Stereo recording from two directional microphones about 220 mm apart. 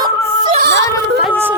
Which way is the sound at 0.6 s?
50° right (ahead or behind).